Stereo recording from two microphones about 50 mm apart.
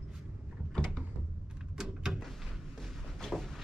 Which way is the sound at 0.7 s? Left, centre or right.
Centre.